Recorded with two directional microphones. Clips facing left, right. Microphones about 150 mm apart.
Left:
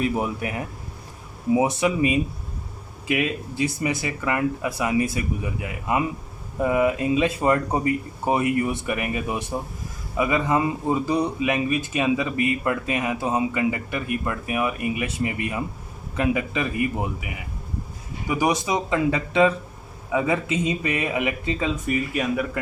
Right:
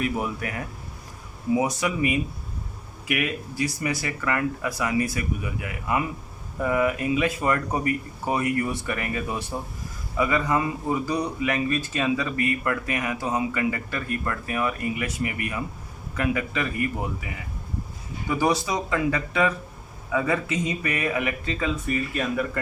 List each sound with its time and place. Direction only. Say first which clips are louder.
0.0 s speech: left 3 dB; 20° left (ahead or behind)